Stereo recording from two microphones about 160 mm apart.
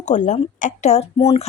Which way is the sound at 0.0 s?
50° left (ahead or behind).